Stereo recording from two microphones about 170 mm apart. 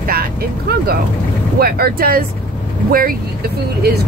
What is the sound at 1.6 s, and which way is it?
Speech, 60° right (ahead or behind).